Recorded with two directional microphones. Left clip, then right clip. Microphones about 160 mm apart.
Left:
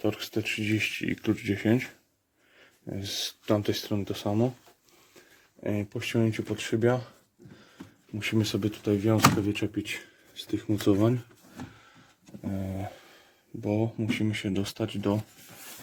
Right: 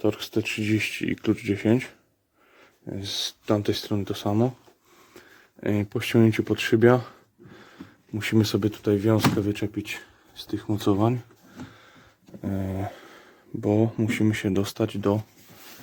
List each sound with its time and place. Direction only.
0.0 s speech: 15° right (ahead or behind)
5.1 s a sound: 25° right (ahead or behind)
5.8 s speech: 40° right (ahead or behind)
8.2 s speech: 30° right (ahead or behind)
12.4 s speech: 30° right (ahead or behind)